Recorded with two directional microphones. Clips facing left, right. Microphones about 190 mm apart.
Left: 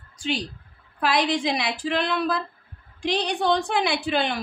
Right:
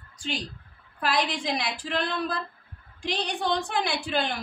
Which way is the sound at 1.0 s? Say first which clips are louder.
Left 5 dB; 75° left (ahead or behind).